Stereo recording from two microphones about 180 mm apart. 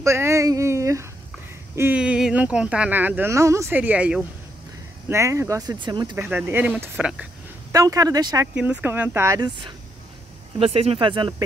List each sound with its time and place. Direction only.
0.0 s speech: 15° right (ahead or behind)
6.1 s speech: 10° right (ahead or behind)
7.7 s speech: 20° right (ahead or behind)
8.5 s speech: 10° right (ahead or behind)
10.6 s speech: 35° right (ahead or behind)